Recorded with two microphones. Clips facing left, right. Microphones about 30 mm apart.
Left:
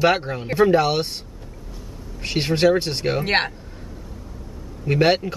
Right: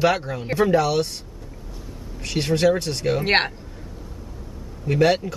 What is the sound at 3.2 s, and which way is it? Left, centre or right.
Speech, centre.